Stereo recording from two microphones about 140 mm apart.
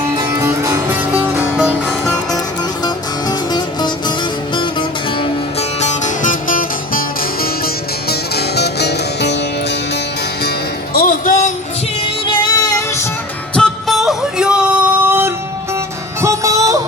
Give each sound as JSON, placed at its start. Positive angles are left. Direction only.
{"t": 0.2, "sound": "music", "side_deg": -20}
{"t": 1.1, "sound": "music", "side_deg": -10}
{"t": 2.8, "sound": "music", "side_deg": 30}
{"t": 5.8, "sound": "music", "side_deg": 60}
{"t": 10.9, "sound": "music", "side_deg": 90}
{"t": 12.0, "sound": "music", "side_deg": 35}
{"t": 13.6, "sound": "music", "side_deg": 0}